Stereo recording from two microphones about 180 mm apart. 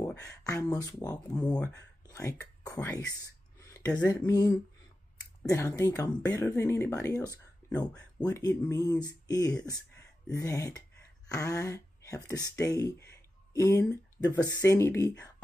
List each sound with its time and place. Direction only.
0.0 s speech: 15° left (ahead or behind)
3.5 s a sound: 15° left (ahead or behind)
4.1 s speech: 20° left (ahead or behind)